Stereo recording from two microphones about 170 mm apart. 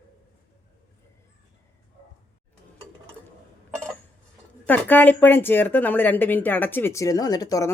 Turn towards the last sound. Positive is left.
turn(degrees=20)  # may be behind; listen again after turning